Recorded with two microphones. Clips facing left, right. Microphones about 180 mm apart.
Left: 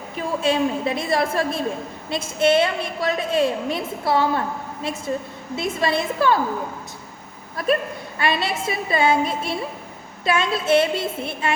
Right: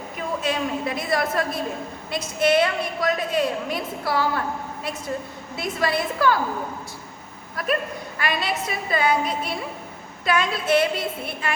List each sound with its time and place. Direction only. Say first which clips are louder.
0.4 s a woman's voice: left 6 dB; 25° left (ahead or behind)
8.2 s a woman's voice: left 3 dB; 25° left (ahead or behind)